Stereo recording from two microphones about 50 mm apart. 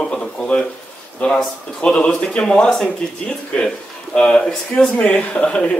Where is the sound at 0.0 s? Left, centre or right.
Centre.